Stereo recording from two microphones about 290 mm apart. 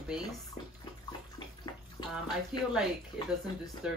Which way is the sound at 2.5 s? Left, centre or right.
Centre.